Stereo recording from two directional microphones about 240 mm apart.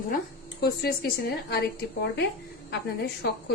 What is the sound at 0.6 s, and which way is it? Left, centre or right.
Speech, left.